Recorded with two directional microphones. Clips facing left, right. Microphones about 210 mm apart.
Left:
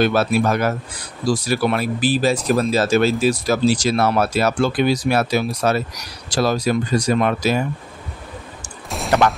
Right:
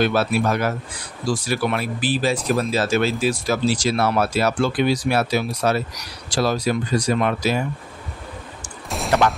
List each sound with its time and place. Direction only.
0.0 s speech: 45° left (ahead or behind)
8.8 s fusillade: centre (ahead or behind)